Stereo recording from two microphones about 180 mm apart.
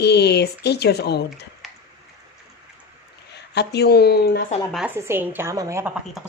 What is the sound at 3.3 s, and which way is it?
Speech, 65° left (ahead or behind).